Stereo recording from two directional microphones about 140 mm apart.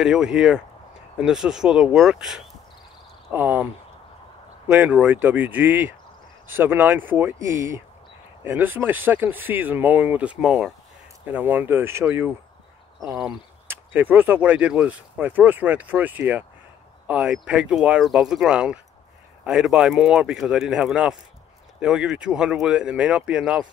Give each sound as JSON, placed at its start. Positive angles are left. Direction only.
{"t": 0.0, "sound": "speech", "side_deg": -5}
{"t": 4.6, "sound": "speech", "side_deg": -10}
{"t": 13.7, "sound": "speech", "side_deg": -15}